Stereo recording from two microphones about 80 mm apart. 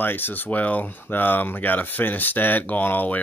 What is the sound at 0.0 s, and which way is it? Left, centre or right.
Speech, left.